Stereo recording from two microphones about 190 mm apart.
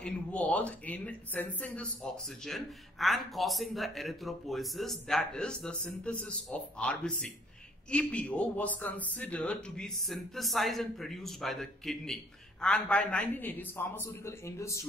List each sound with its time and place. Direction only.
0.0 s speech: 5° left (ahead or behind)